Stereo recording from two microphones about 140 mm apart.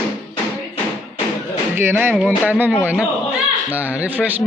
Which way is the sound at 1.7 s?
15° right (ahead or behind).